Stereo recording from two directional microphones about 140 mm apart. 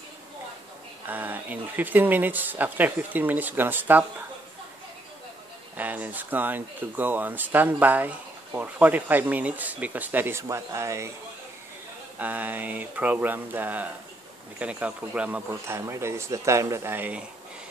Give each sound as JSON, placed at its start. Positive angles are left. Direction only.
{"t": 1.0, "sound": "speech", "side_deg": -15}
{"t": 5.8, "sound": "speech", "side_deg": -10}
{"t": 12.2, "sound": "speech", "side_deg": -10}